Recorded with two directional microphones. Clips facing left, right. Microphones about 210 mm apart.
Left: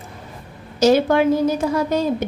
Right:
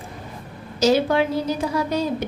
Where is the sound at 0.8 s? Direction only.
50° left (ahead or behind).